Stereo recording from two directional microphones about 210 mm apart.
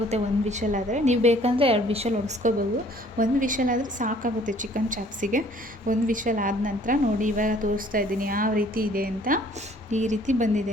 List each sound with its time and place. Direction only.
0.1 s a woman's voice: 35° right (ahead or behind)